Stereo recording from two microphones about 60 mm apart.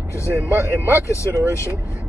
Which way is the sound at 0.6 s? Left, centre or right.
Right.